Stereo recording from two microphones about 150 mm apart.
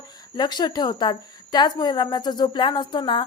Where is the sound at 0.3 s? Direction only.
30° left (ahead or behind).